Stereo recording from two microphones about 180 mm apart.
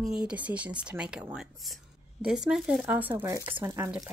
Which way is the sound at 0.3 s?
5° right (ahead or behind).